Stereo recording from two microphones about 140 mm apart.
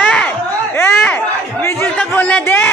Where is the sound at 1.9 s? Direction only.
10° left (ahead or behind).